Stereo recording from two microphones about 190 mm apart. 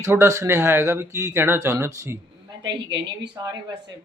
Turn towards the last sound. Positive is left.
turn(degrees=-65)  # may be behind; listen again after turning